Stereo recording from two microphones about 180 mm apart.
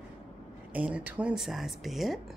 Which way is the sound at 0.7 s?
10° right (ahead or behind).